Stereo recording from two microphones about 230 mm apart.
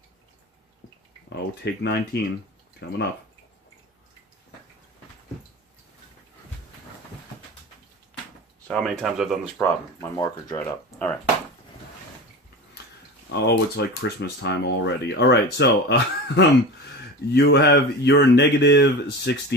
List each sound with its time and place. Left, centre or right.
1.4 s speech: left
8.6 s speech: centre
9.6 s speech: centre
13.3 s speech: left